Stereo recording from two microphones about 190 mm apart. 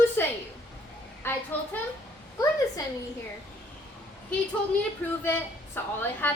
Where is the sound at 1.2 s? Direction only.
10° left (ahead or behind).